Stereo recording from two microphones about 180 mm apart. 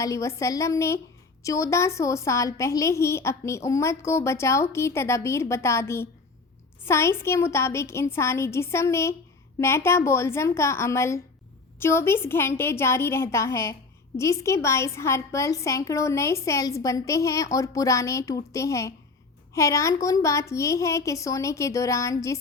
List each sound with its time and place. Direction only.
0.0 s a woman's voice: 15° left (ahead or behind)